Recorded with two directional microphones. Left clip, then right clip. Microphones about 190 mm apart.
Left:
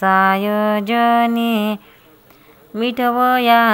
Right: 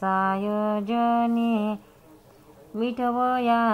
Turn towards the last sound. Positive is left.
turn(degrees=30)  # may be behind; listen again after turning